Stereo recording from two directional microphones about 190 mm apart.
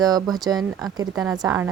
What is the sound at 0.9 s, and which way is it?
Speech, 20° right (ahead or behind).